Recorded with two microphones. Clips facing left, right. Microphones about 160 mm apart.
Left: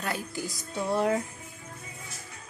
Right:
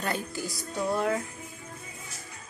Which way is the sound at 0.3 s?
20° left (ahead or behind).